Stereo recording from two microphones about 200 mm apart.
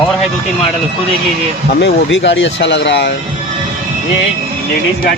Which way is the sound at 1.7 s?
60° left (ahead or behind).